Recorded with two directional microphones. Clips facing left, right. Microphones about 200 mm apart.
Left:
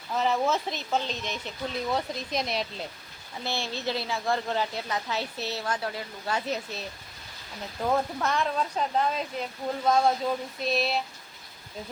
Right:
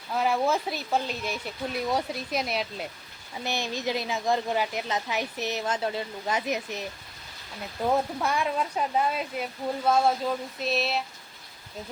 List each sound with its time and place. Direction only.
0.2 s speech: 10° right (ahead or behind)
3.4 s speech: 15° right (ahead or behind)
7.9 s speech: 10° right (ahead or behind)
10.6 s a sound: centre (ahead or behind)